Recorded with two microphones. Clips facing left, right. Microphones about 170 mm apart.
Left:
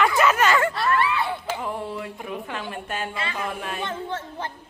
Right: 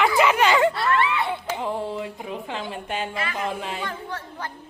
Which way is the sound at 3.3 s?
25° right (ahead or behind).